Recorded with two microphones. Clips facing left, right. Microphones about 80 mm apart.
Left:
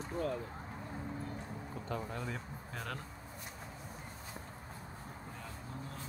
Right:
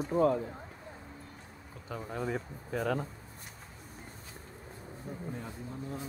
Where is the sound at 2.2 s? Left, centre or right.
Centre.